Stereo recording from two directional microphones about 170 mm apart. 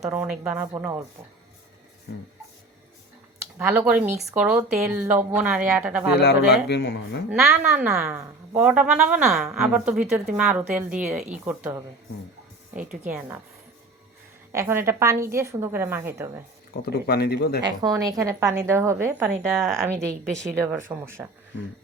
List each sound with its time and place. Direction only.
0.0 s a woman's voice: 10° right (ahead or behind)
3.6 s a woman's voice: 10° right (ahead or behind)
6.1 s speech: 75° left (ahead or behind)
7.5 s speech: 5° right (ahead or behind)
7.9 s a woman's voice: 15° right (ahead or behind)
13.1 s a woman's voice: 10° right (ahead or behind)
14.5 s a woman's voice: 15° right (ahead or behind)
16.8 s speech: 65° left (ahead or behind)
17.8 s a woman's voice: 20° right (ahead or behind)